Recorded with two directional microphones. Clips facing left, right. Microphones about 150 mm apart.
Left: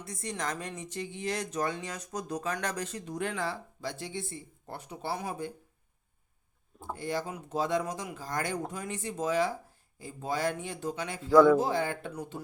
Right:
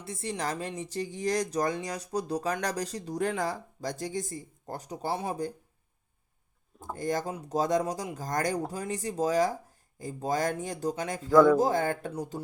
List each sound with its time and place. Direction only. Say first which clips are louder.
0.0 s speech: right 3 dB; 30° right (ahead or behind)
6.9 s speech: right 3 dB; 45° right (ahead or behind)